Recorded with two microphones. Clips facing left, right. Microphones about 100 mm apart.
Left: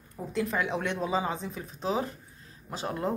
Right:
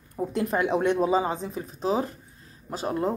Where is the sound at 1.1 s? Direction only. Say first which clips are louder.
Right 5 dB; 30° right (ahead or behind).